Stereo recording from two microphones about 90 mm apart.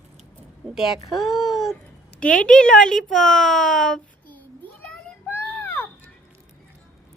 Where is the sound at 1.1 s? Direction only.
Centre (ahead or behind).